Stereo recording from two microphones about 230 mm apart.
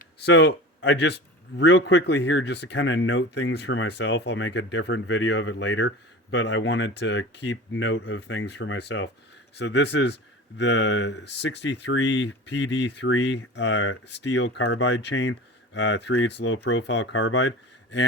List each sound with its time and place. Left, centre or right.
0.0 s speech: left